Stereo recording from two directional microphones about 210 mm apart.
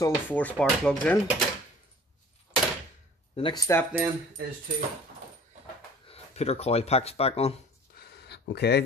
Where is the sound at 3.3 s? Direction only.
25° left (ahead or behind).